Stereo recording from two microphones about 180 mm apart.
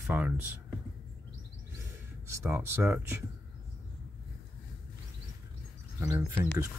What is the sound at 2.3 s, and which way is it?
Speech, 15° right (ahead or behind).